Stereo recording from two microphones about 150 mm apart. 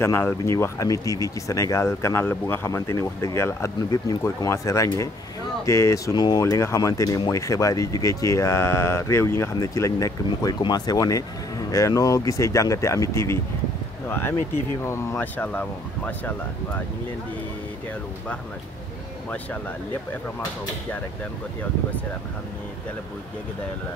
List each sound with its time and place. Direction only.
0.0 s speech: 15° left (ahead or behind)